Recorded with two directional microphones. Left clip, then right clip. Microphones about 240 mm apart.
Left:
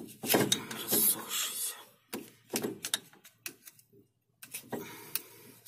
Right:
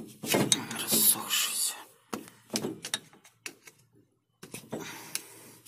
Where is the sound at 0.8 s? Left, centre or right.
Right.